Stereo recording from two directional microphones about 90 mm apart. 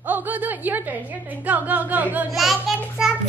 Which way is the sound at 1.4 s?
20° right (ahead or behind).